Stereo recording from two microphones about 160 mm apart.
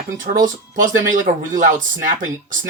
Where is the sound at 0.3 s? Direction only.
55° right (ahead or behind).